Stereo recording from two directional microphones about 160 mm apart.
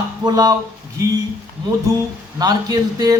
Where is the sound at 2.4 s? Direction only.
25° right (ahead or behind).